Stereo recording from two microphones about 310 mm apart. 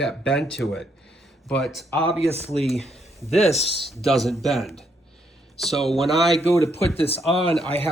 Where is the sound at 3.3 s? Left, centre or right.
Centre.